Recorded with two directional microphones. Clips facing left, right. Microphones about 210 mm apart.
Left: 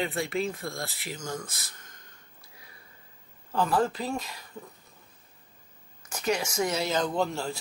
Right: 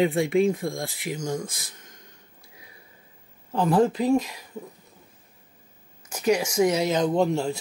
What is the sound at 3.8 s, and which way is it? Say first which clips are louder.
Speech: right 9 dB; 10° right (ahead or behind).